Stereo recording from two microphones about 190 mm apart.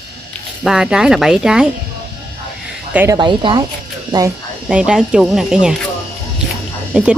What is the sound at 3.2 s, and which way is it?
Speech, 25° right (ahead or behind).